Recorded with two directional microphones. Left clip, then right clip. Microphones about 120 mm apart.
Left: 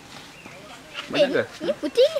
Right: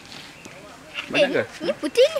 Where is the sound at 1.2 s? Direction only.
45° right (ahead or behind).